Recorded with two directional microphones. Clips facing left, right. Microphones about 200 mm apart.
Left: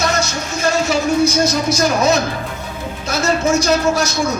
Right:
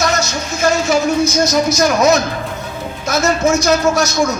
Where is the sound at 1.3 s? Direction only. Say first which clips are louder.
Right 2 dB; 30° left (ahead or behind).